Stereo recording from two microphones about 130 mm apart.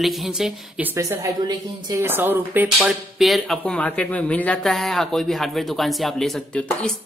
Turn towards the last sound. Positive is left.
turn(degrees=5)  # may be behind; listen again after turning